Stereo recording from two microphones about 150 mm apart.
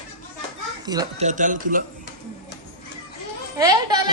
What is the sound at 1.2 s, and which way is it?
Speech, 55° right (ahead or behind).